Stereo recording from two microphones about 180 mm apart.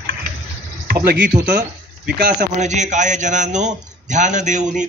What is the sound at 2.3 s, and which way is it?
A man's voice, 40° right (ahead or behind).